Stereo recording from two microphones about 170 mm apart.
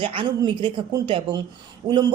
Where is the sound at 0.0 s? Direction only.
30° right (ahead or behind).